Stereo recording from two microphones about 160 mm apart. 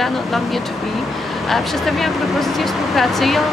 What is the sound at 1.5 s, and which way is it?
Speech, centre (ahead or behind).